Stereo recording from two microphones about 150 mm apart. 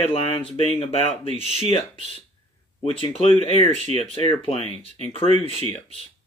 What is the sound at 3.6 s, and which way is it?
Speech, 50° right (ahead or behind).